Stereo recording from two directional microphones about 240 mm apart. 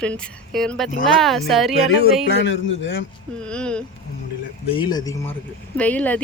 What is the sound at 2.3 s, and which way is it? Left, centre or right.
Speech, left.